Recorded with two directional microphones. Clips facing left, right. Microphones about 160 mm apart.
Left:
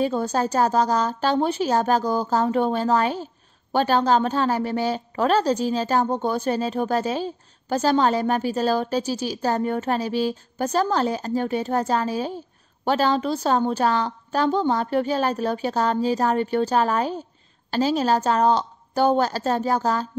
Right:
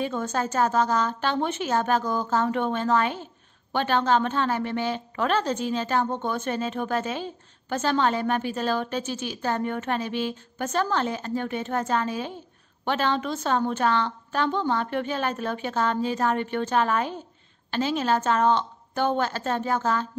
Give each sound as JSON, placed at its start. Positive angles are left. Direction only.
{"t": 0.0, "sound": "a woman's voice", "side_deg": 35}